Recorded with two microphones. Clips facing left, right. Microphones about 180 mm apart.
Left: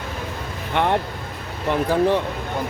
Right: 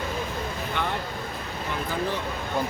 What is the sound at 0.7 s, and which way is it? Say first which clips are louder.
Speech: left 12 dB; 65° left (ahead or behind).